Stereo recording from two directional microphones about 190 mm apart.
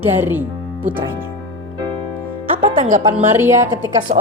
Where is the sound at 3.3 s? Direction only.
15° right (ahead or behind).